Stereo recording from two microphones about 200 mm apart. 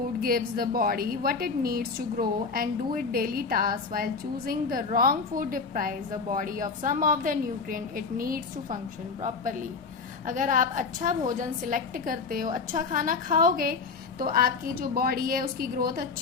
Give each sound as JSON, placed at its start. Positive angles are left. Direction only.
{"t": 0.2, "sound": "a woman's voice", "side_deg": -45}